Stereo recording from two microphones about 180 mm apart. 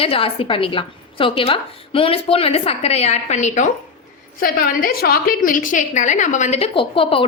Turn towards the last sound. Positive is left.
turn(degrees=30)  # may be behind; listen again after turning